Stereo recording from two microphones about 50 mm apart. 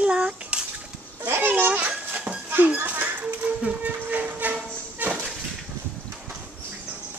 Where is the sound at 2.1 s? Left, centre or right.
Right.